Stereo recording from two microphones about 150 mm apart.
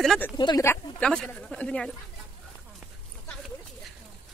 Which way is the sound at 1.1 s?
5° left (ahead or behind).